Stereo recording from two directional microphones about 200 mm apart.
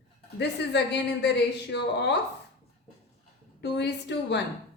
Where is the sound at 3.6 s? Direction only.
60° left (ahead or behind).